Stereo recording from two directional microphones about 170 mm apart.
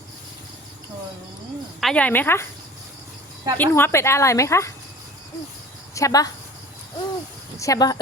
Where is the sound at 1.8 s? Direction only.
5° left (ahead or behind).